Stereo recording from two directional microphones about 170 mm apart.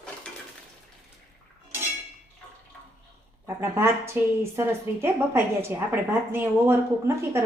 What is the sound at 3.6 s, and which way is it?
Speech, 15° right (ahead or behind).